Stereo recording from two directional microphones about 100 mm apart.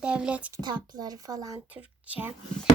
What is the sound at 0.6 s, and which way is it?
Speech, 45° right (ahead or behind).